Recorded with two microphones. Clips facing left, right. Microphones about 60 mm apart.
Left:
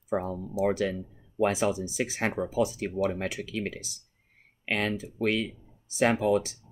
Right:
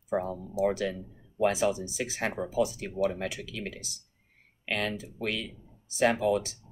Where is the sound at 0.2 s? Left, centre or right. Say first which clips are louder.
Even; left.